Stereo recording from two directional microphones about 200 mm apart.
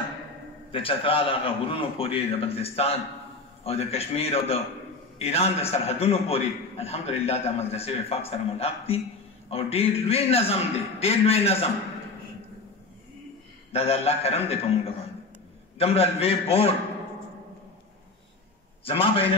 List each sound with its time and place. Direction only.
0.7 s a man's voice: 25° left (ahead or behind)
13.7 s a man's voice: 30° left (ahead or behind)
15.8 s a man's voice: 30° left (ahead or behind)
18.9 s a man's voice: 30° left (ahead or behind)